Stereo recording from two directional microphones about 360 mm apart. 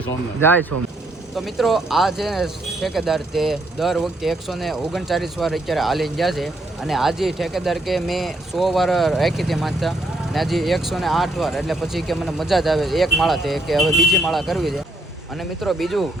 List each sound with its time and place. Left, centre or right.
0.3 s speech: centre